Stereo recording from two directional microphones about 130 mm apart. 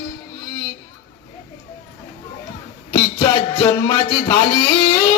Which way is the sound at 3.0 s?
40° left (ahead or behind).